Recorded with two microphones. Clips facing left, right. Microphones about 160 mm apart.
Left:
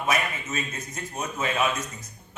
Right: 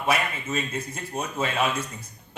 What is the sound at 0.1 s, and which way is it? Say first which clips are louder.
A man's voice: right 3 dB; 30° right (ahead or behind).